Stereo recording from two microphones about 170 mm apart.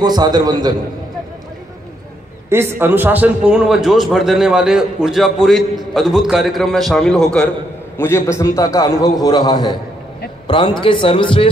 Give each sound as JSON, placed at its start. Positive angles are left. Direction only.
{"t": 0.0, "sound": "a man's voice", "side_deg": -25}
{"t": 2.5, "sound": "a man's voice", "side_deg": -15}
{"t": 8.0, "sound": "a man's voice", "side_deg": 15}